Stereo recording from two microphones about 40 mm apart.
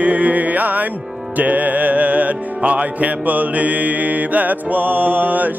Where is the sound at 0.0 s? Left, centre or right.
Right.